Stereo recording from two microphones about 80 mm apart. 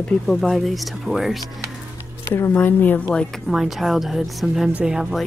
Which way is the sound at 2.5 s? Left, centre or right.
Left.